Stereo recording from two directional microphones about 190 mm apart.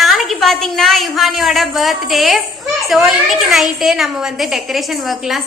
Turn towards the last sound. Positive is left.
turn(degrees=0)  # may be behind; listen again after turning